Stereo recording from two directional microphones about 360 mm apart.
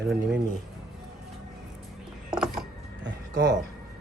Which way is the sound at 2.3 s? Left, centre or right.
Centre.